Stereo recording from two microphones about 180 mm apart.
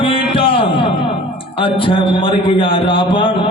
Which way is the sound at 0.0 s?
30° left (ahead or behind).